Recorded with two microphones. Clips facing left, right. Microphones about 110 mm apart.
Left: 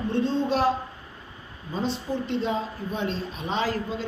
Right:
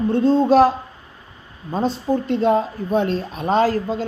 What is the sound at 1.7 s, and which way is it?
Speech, 50° right (ahead or behind).